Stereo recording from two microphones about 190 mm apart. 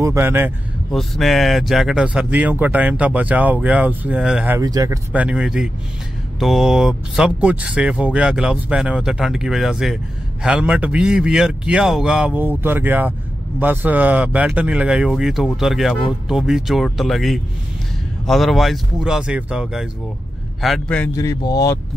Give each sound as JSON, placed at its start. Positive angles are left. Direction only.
{"t": 0.0, "sound": "speech", "side_deg": -15}
{"t": 0.9, "sound": "speech", "side_deg": 0}
{"t": 21.1, "sound": "speech", "side_deg": 15}